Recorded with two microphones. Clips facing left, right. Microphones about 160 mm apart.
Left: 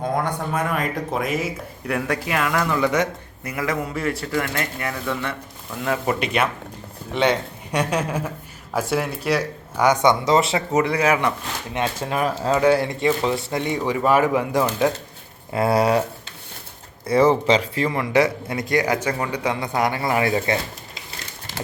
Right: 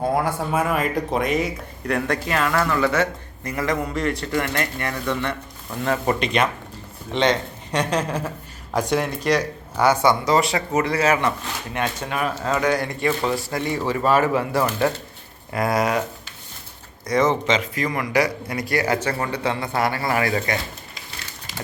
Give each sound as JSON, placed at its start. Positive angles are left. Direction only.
{"t": 0.1, "sound": "speech", "side_deg": -5}
{"t": 12.0, "sound": "speech", "side_deg": 30}
{"t": 15.5, "sound": "speech", "side_deg": 30}
{"t": 17.1, "sound": "speech", "side_deg": 30}